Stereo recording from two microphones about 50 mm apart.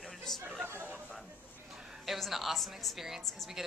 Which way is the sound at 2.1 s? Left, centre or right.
Centre.